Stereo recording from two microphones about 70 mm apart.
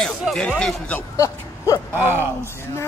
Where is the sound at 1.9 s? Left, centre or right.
Left.